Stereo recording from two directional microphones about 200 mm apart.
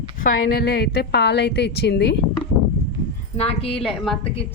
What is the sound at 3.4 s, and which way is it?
Speech, 30° left (ahead or behind).